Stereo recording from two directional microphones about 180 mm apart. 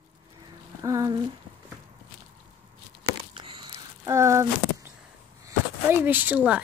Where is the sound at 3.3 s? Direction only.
25° right (ahead or behind).